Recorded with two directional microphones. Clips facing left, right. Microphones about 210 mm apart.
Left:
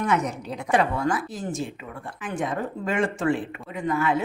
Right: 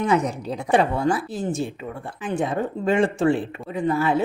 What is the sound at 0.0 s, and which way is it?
Speech, 30° right (ahead or behind).